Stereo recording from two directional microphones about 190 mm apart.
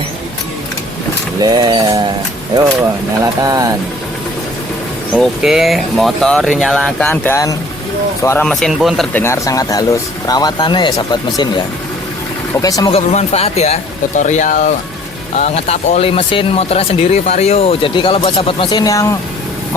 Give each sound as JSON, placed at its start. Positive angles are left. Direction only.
{"t": 1.4, "sound": "a sound", "side_deg": -20}
{"t": 3.4, "sound": "speech", "side_deg": -20}
{"t": 5.1, "sound": "speech", "side_deg": -5}
{"t": 9.1, "sound": "speech", "side_deg": 15}
{"t": 12.6, "sound": "speech", "side_deg": 20}
{"t": 12.9, "sound": "speech", "side_deg": 35}